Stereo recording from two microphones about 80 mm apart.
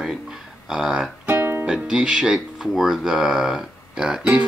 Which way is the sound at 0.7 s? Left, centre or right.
Centre.